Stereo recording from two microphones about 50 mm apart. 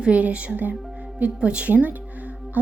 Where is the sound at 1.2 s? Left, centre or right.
Right.